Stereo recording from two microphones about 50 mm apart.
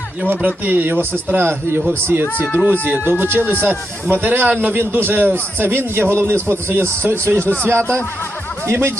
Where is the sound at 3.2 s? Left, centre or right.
Right.